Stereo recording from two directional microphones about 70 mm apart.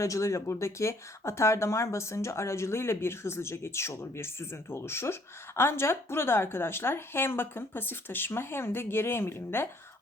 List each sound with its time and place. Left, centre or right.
0.0 s speech: left